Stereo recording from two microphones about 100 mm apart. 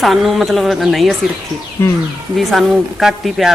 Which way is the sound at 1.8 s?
25° left (ahead or behind).